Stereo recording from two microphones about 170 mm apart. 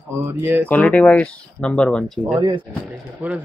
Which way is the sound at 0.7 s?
10° left (ahead or behind).